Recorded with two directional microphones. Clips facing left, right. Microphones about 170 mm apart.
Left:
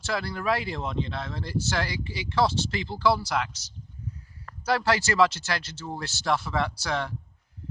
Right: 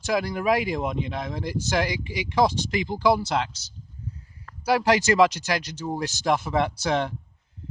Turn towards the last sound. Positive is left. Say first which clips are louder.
# right 5 dB
turn(degrees=-20)  # may be behind; listen again after turning